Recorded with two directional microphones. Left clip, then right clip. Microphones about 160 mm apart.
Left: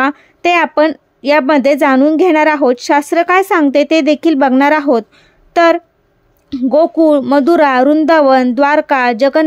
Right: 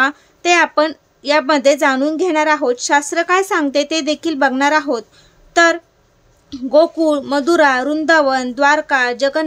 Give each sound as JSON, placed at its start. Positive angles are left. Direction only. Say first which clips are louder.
{"t": 0.0, "sound": "a woman's voice", "louder": "left 3 dB", "side_deg": 45}